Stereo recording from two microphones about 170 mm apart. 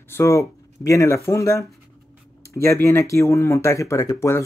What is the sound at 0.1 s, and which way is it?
Speech, 15° left (ahead or behind).